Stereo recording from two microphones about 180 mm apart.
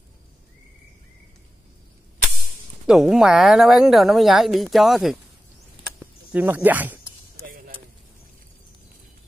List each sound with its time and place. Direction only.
2.9 s speech: centre (ahead or behind)
6.3 s speech: 10° right (ahead or behind)
7.4 s vehicle: 55° right (ahead or behind)